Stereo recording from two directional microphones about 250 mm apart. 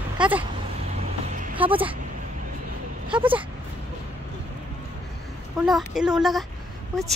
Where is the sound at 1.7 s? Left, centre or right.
Right.